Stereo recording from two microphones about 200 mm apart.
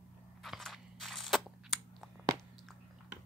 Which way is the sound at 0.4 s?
Centre (ahead or behind).